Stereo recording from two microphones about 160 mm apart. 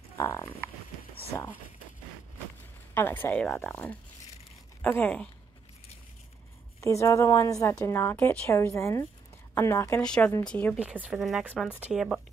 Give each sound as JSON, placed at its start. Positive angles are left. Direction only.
{"t": 0.2, "sound": "a woman's voice", "side_deg": 15}
{"t": 2.9, "sound": "a woman's voice", "side_deg": 15}
{"t": 6.8, "sound": "a woman's voice", "side_deg": 20}
{"t": 10.0, "sound": "a woman's voice", "side_deg": 5}
{"t": 10.8, "sound": "speech", "side_deg": -5}